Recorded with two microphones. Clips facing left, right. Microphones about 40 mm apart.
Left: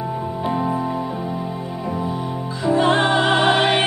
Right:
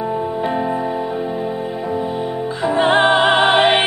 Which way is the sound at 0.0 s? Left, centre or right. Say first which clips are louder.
Right 4 dB; right.